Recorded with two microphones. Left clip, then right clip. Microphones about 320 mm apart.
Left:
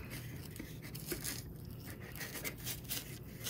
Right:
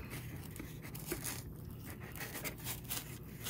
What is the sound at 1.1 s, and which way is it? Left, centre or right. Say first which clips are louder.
Scrape: even; centre.